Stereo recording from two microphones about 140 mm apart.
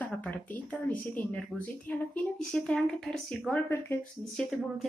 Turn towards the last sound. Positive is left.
turn(degrees=0)  # may be behind; listen again after turning